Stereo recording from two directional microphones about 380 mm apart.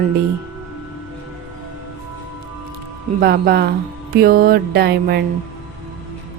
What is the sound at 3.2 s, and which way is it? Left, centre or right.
Music, right.